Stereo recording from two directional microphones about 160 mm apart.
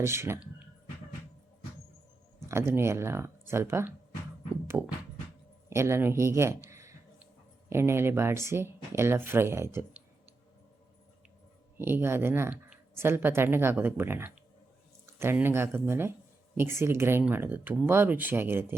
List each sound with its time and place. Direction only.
0.0 s speech: 15° right (ahead or behind)
2.5 s speech: 15° right (ahead or behind)
11.8 s speech: 15° right (ahead or behind)